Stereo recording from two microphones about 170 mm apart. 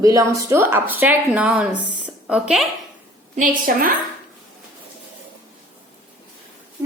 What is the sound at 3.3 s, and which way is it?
Speech, 50° right (ahead or behind).